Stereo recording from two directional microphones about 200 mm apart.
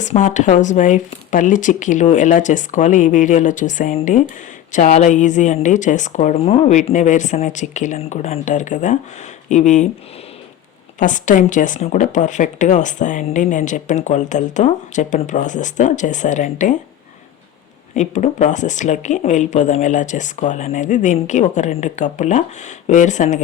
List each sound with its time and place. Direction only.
0.0 s speech: 40° left (ahead or behind)
11.0 s speech: 40° left (ahead or behind)
17.9 s speech: 35° left (ahead or behind)